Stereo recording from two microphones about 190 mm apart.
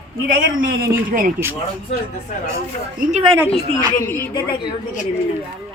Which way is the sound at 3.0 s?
40° right (ahead or behind).